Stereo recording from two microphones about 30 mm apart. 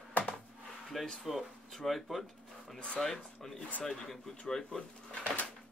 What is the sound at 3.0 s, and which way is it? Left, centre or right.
Speech, left.